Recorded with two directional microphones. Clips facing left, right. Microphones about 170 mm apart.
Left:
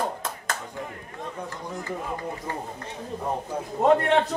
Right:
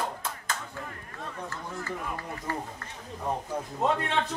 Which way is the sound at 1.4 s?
15° left (ahead or behind).